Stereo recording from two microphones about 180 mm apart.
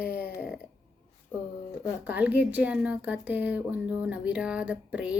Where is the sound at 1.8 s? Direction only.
10° right (ahead or behind).